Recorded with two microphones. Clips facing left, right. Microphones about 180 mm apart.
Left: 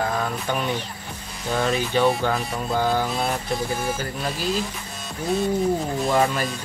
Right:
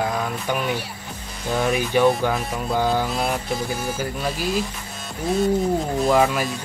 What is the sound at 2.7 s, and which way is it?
Speech, 15° right (ahead or behind).